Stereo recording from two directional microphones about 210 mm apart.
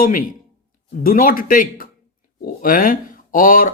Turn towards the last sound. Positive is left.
turn(degrees=40)  # may be behind; listen again after turning